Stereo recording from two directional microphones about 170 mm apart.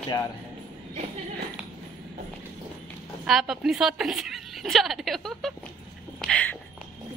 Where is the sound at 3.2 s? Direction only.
Centre (ahead or behind).